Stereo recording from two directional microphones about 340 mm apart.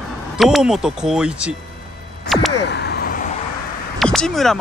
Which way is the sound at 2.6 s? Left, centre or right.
Left.